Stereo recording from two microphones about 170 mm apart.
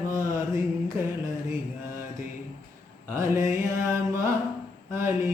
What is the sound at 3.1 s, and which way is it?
Music, 15° right (ahead or behind).